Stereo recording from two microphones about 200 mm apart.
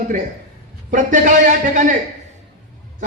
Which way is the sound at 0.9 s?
40° right (ahead or behind).